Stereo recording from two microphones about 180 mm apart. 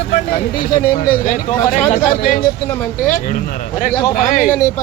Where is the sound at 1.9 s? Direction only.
45° left (ahead or behind).